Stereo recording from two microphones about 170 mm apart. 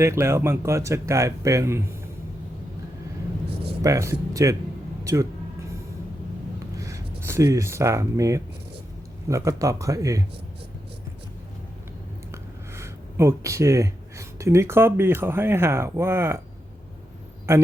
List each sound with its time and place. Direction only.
0.0 s speech: 15° right (ahead or behind)
3.8 s speech: 15° right (ahead or behind)
6.7 s speech: 20° right (ahead or behind)
12.3 s speech: 15° right (ahead or behind)
17.5 s speech: 15° right (ahead or behind)